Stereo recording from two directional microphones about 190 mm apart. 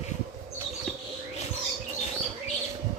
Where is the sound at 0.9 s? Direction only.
Centre (ahead or behind).